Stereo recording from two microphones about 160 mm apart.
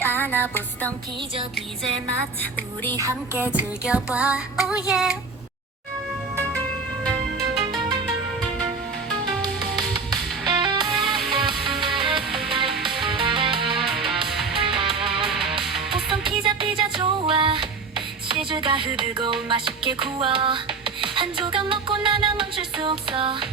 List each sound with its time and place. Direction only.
0.0 s music: 10° left (ahead or behind)
2.9 s music: 20° right (ahead or behind)
7.0 s music: 5° left (ahead or behind)
9.7 s music: 30° right (ahead or behind)
10.9 s music: centre (ahead or behind)
11.3 s music: 30° right (ahead or behind)
11.7 s music: centre (ahead or behind)
11.9 s music: 30° right (ahead or behind)
12.3 s music: centre (ahead or behind)
12.8 s music: 30° right (ahead or behind)
13.7 s music: centre (ahead or behind)
14.6 s music: 35° right (ahead or behind)
15.3 s music: centre (ahead or behind)
16.0 s music: 30° right (ahead or behind)